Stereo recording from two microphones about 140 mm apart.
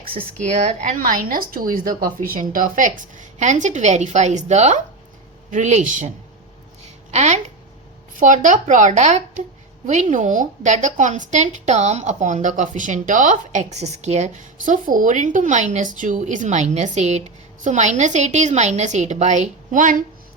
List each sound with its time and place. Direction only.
0.3 s a woman's voice: 55° right (ahead or behind)
6.8 s a sound: 55° right (ahead or behind)
8.1 s a woman's voice: 65° right (ahead or behind)